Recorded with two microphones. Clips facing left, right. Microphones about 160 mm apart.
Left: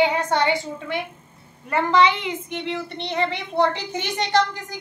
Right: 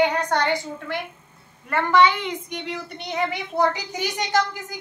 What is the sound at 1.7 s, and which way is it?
Speech, 25° left (ahead or behind).